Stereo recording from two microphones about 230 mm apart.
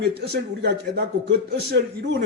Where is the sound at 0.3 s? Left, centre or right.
Right.